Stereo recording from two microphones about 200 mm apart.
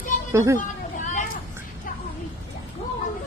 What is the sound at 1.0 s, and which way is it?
Vehicle, 40° left (ahead or behind).